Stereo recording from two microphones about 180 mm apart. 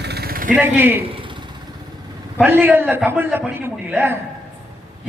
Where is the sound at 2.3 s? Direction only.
10° right (ahead or behind).